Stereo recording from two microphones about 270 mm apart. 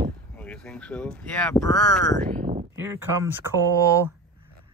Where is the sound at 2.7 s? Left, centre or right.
Centre.